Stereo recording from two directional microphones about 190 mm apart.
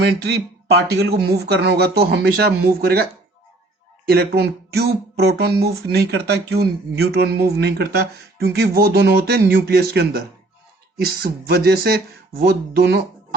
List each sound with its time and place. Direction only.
0.0 s speech: 60° right (ahead or behind)